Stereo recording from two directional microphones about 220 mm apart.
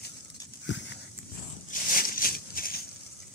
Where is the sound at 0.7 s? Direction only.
55° left (ahead or behind).